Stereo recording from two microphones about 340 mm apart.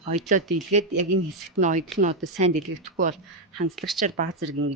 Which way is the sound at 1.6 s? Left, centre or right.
Right.